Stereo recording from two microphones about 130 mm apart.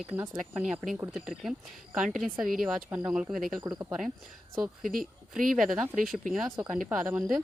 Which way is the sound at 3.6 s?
25° right (ahead or behind).